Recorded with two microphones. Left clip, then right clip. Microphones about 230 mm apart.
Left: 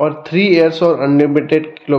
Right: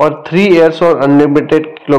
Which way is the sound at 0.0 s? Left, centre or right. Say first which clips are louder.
Right 4 dB; centre.